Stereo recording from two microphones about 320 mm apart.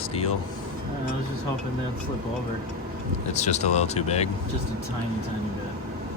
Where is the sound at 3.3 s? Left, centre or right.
Left.